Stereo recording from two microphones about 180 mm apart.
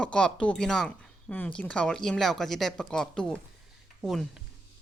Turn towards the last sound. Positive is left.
turn(degrees=0)  # may be behind; listen again after turning